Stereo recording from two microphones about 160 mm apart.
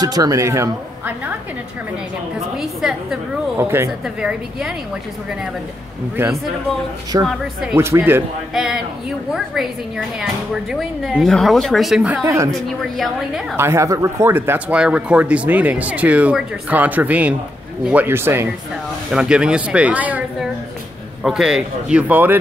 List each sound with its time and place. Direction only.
0.0 s a woman's voice: 25° right (ahead or behind)
2.5 s speech: centre (ahead or behind)
3.5 s speech: 15° right (ahead or behind)
4.0 s speech: 5° right (ahead or behind)
7.1 s a woman's voice: 25° right (ahead or behind)
8.5 s speech: 5° right (ahead or behind)
12.2 s a woman's voice: 20° right (ahead or behind)
12.9 s speech: centre (ahead or behind)
13.6 s speech: 15° right (ahead or behind)